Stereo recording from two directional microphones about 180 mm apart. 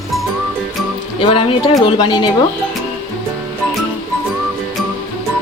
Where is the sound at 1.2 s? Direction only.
30° left (ahead or behind).